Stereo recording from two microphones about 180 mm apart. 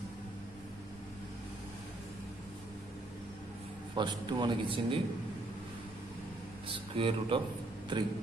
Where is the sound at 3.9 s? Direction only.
25° right (ahead or behind).